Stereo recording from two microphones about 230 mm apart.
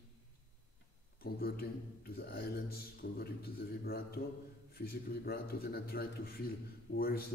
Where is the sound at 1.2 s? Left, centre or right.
Left.